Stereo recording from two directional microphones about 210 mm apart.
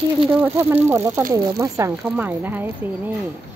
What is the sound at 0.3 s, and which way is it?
Speech, 10° right (ahead or behind).